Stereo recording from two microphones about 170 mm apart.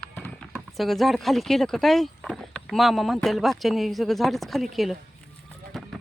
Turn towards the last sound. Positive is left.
turn(degrees=0)  # may be behind; listen again after turning